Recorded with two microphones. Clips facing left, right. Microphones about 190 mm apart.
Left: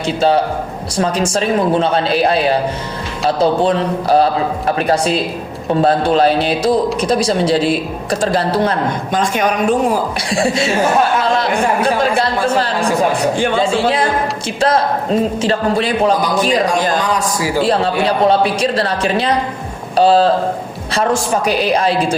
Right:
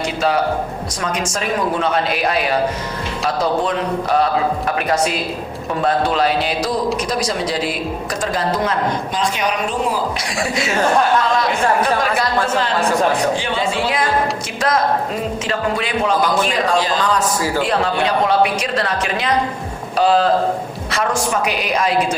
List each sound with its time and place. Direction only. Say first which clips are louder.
0.9 s a woman's voice: left 8 dB; 30° left (ahead or behind)
9.1 s speech: left 4 dB; 50° left (ahead or behind)
10.2 s a woman's voice: left 5 dB; 30° left (ahead or behind)
13.7 s speech: left 3 dB; 30° left (ahead or behind)
17.0 s a man's voice: left 1 dB; 15° left (ahead or behind)
17.6 s speech: left 5 dB; 30° left (ahead or behind)